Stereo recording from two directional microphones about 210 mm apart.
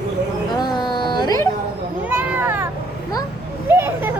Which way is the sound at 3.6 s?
10° right (ahead or behind).